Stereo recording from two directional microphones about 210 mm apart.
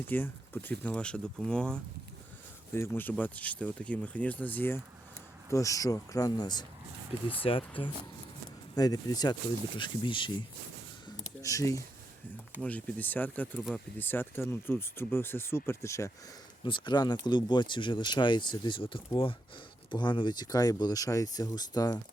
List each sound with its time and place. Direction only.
0.0 s speech: 10° left (ahead or behind)
11.4 s speech: 15° left (ahead or behind)